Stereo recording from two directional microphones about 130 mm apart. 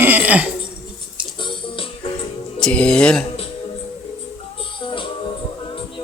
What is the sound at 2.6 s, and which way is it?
Speech, 5° left (ahead or behind).